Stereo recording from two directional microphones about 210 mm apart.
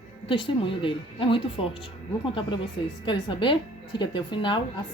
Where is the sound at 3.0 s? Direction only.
20° left (ahead or behind).